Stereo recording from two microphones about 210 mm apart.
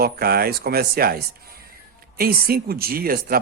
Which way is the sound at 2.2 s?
45° right (ahead or behind).